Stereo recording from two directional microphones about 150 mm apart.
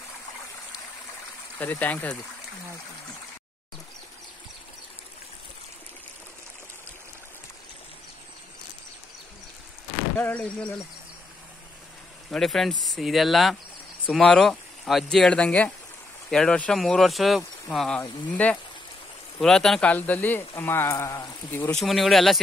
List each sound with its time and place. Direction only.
1.6 s speech: 10° left (ahead or behind)
10.1 s speech: 10° left (ahead or behind)
12.3 s speech: centre (ahead or behind)
21.7 s speech: centre (ahead or behind)